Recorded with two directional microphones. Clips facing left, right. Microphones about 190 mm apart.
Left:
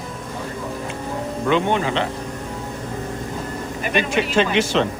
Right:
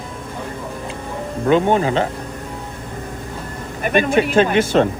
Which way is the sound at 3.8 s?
50° right (ahead or behind).